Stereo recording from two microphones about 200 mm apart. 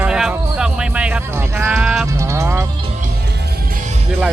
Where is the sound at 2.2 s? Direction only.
15° right (ahead or behind).